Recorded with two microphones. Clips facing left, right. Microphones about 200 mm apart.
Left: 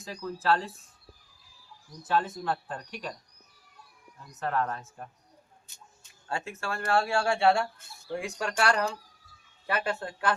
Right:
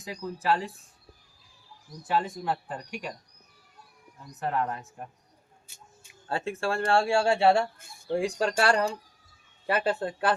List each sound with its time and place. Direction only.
0.0 s speech: 15° right (ahead or behind)
2.0 s speech: 15° right (ahead or behind)
4.4 s speech: 15° right (ahead or behind)
6.2 s speech: 30° right (ahead or behind)